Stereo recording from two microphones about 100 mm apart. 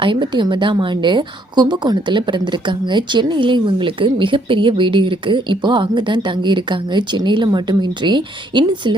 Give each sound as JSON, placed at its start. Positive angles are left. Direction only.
{"t": 0.0, "sound": "a woman's voice", "side_deg": -55}